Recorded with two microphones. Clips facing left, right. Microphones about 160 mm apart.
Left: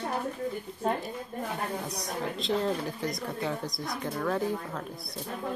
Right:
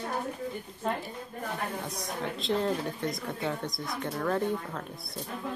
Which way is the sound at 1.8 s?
Centre (ahead or behind).